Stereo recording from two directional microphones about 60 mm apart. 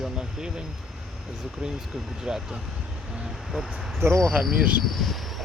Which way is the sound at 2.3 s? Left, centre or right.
Centre.